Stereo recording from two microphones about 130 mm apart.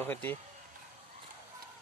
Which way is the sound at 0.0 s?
15° left (ahead or behind).